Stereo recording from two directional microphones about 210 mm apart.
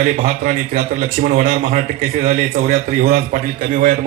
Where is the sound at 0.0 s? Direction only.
40° right (ahead or behind).